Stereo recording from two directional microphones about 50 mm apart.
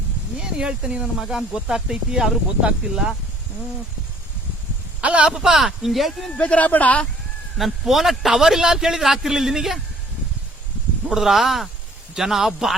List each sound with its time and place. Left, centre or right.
0.3 s speech: centre
4.9 s speech: right
5.3 s a man's voice: centre
6.3 s speech: left
6.6 s speech: left
7.6 s a man's voice: centre
11.1 s a man's voice: centre